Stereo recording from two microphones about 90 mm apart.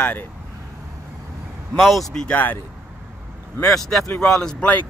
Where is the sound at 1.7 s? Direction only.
Centre (ahead or behind).